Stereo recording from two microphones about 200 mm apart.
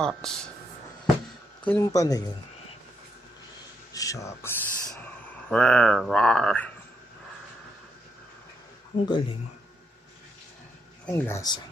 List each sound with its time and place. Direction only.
0.0 s speech: 5° left (ahead or behind)
1.6 s speech: 15° left (ahead or behind)
3.9 s speech: 15° left (ahead or behind)
9.0 s speech: 25° left (ahead or behind)
11.0 s speech: 15° left (ahead or behind)